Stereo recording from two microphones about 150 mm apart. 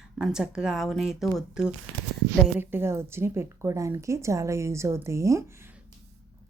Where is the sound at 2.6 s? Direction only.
15° right (ahead or behind).